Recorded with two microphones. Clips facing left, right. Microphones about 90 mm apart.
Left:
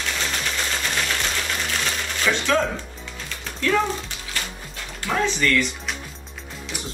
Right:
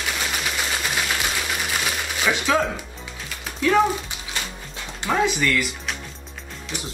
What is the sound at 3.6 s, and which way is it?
Speech, 10° right (ahead or behind).